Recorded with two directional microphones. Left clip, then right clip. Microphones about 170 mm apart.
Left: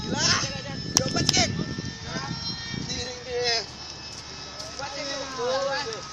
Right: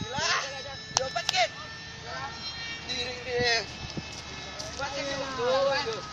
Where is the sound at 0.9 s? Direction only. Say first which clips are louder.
Left 3 dB; 35° right (ahead or behind).